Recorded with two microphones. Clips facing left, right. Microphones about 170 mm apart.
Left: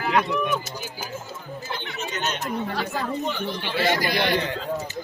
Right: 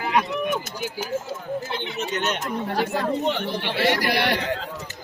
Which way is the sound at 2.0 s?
60° right (ahead or behind).